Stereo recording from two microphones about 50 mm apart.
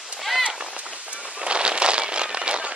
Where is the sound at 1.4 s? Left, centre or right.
Right.